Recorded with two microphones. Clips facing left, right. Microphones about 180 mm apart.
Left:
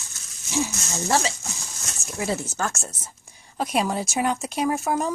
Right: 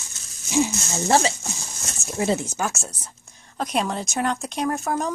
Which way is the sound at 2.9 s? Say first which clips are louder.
Even; 10° left (ahead or behind).